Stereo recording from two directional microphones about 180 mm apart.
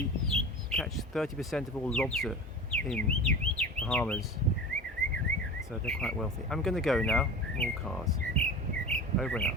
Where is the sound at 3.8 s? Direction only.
5° left (ahead or behind).